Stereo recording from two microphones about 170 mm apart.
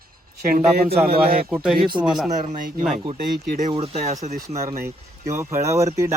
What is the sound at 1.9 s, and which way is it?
Speech, 25° right (ahead or behind).